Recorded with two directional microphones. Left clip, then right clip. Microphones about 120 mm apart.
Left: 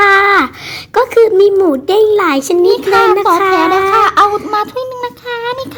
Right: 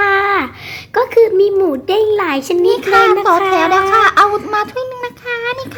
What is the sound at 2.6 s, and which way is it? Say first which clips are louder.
A child's voice: even; 5° right (ahead or behind).